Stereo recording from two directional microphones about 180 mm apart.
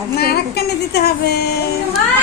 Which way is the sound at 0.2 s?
65° left (ahead or behind).